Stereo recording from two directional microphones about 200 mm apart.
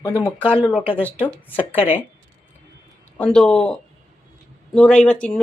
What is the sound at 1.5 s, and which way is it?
Speech, 30° left (ahead or behind).